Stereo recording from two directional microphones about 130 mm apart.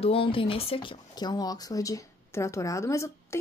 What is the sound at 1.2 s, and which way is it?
Speech, 30° left (ahead or behind).